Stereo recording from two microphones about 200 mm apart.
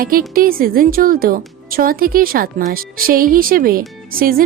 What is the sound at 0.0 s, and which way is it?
A woman's voice, 45° right (ahead or behind).